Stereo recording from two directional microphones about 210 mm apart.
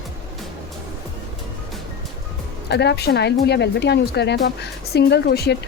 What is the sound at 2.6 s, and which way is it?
Speech, 55° left (ahead or behind).